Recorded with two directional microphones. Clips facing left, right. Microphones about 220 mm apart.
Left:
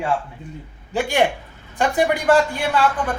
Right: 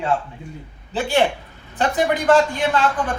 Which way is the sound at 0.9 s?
15° left (ahead or behind).